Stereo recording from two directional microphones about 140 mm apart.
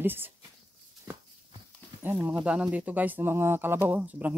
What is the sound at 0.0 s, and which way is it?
Speech, 15° right (ahead or behind).